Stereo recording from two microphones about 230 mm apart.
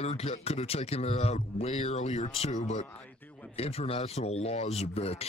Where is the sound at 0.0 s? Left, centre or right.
Left.